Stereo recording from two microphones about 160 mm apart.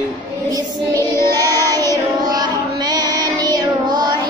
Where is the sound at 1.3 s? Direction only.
25° right (ahead or behind).